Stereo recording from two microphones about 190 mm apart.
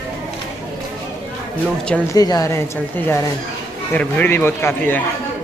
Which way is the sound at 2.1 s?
20° left (ahead or behind).